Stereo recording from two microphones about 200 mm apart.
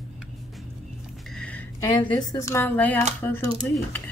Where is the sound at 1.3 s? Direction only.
5° left (ahead or behind).